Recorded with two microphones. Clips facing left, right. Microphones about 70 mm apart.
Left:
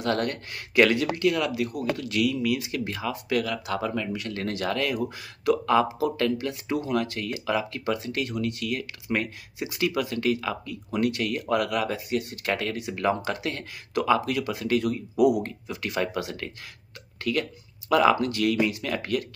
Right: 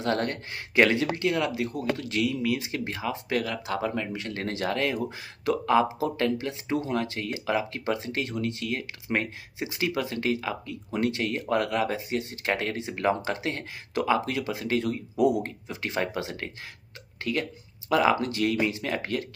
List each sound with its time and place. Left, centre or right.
0.0 s speech: right